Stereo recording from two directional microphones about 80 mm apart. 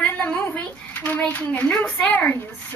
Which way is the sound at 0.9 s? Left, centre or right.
Left.